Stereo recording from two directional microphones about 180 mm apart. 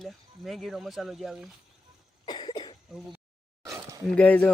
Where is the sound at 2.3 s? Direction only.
25° left (ahead or behind).